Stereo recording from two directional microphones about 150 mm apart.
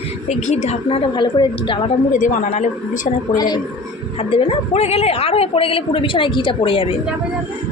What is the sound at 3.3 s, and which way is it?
Speech, 25° left (ahead or behind).